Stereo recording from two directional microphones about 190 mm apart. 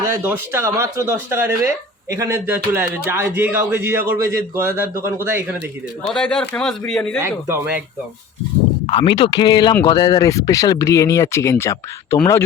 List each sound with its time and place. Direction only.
0.0 s speech: 10° right (ahead or behind)
6.0 s a man's voice: 5° left (ahead or behind)
7.2 s speech: 10° right (ahead or behind)
8.9 s speech: 25° left (ahead or behind)